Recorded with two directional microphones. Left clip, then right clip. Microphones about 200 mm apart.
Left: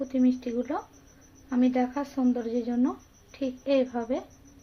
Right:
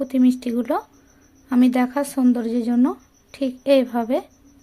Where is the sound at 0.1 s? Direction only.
65° right (ahead or behind).